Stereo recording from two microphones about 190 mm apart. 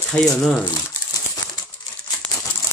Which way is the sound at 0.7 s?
20° left (ahead or behind).